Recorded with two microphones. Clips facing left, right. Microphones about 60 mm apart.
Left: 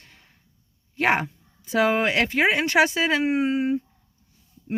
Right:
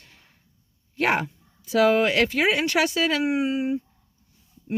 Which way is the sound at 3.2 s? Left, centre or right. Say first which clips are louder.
Left 1 dB; left.